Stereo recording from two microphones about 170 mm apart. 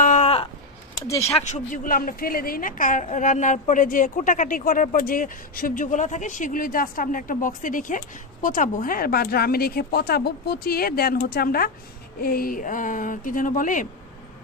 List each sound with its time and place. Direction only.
0.0 s a sound: 45° left (ahead or behind)
1.0 s speech: 20° left (ahead or behind)
1.5 s a woman's voice: 50° left (ahead or behind)